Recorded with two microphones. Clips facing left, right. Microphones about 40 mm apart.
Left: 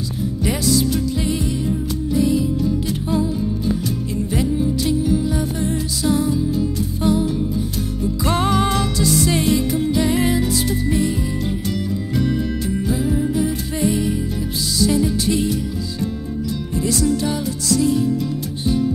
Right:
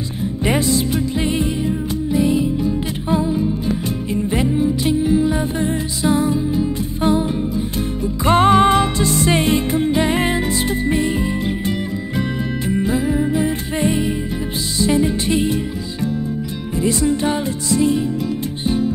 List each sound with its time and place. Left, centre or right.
0.4 s music: right
1.6 s music: right
12.6 s music: right
16.8 s music: right